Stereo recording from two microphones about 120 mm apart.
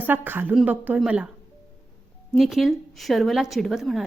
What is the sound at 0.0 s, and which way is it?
Speech, 15° right (ahead or behind).